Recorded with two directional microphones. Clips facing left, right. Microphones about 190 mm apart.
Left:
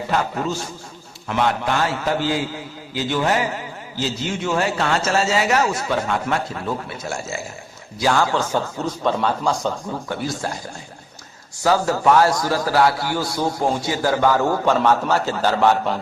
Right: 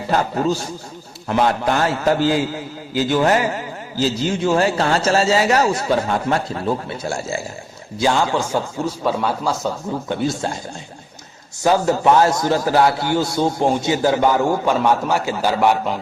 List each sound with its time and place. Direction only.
0.1 s a man's voice: 35° right (ahead or behind)
4.4 s a man's voice: 35° right (ahead or behind)
8.4 s speech: 10° right (ahead or behind)
10.1 s a man's voice: 25° right (ahead or behind)
11.6 s a man's voice: 20° right (ahead or behind)